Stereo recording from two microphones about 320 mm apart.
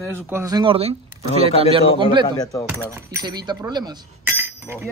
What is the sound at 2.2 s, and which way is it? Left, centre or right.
Speech, centre.